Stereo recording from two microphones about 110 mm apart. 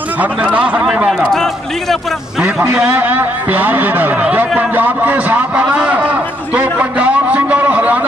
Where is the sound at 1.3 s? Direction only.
5° left (ahead or behind).